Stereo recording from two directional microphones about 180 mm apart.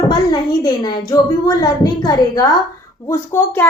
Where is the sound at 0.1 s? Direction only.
25° left (ahead or behind).